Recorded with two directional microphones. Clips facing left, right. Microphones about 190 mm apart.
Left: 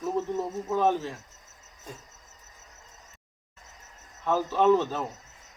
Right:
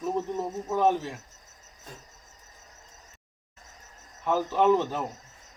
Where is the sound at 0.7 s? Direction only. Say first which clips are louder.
Right 1 dB; 15° right (ahead or behind).